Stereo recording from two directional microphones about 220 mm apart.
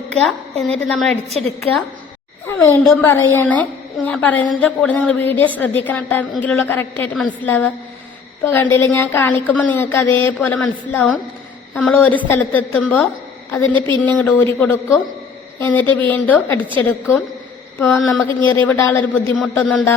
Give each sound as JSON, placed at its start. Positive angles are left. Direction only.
{"t": 0.1, "sound": "a woman's voice", "side_deg": 0}
{"t": 2.8, "sound": "a woman's voice", "side_deg": 10}
{"t": 17.7, "sound": "a woman's voice", "side_deg": 10}